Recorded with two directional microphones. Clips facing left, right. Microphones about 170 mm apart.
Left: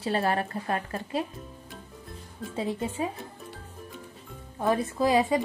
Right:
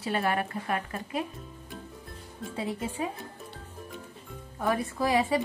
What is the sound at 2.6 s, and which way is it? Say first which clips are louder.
Speech: left 3 dB; 25° left (ahead or behind).